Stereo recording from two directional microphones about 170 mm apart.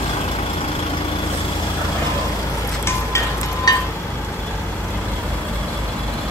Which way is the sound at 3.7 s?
25° left (ahead or behind).